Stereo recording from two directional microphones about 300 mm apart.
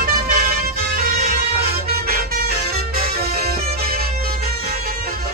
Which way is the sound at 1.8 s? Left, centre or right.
Right.